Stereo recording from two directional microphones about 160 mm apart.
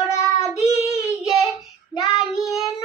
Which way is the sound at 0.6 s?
20° left (ahead or behind).